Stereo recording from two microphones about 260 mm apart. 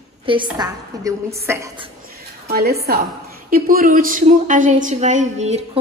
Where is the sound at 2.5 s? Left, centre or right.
Right.